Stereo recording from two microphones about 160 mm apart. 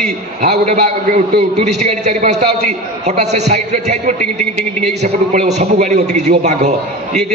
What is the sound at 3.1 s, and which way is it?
A man's voice, 45° right (ahead or behind).